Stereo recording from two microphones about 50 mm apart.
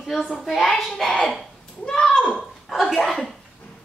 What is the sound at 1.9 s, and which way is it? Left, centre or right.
Speech, centre.